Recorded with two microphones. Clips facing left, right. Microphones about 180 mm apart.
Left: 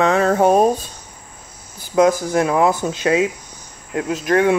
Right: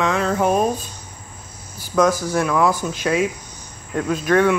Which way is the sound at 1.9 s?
30° left (ahead or behind).